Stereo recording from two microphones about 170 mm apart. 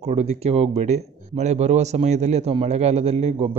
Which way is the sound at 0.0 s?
40° right (ahead or behind).